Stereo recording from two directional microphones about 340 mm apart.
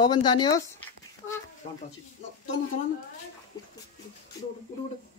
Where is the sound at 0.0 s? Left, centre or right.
Centre.